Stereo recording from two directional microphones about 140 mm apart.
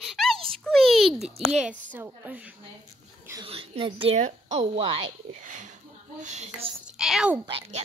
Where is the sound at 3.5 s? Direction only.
40° right (ahead or behind).